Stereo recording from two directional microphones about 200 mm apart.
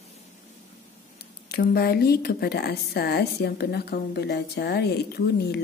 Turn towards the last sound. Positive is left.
turn(degrees=55)  # may be behind; listen again after turning